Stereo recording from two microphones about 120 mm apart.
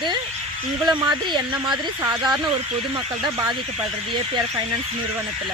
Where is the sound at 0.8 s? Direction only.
35° right (ahead or behind).